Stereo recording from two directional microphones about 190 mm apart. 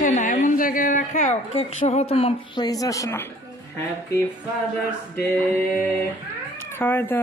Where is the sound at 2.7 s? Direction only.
20° left (ahead or behind).